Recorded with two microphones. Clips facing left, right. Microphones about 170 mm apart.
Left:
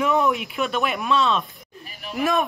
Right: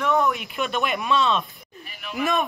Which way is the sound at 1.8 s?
35° left (ahead or behind).